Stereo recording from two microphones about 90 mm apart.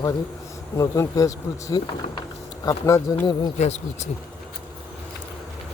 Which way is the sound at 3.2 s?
50° left (ahead or behind).